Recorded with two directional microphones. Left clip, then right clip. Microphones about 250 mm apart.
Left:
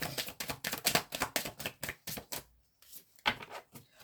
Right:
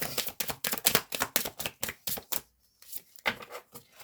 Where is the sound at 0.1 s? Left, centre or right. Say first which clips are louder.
Right 4 dB; right.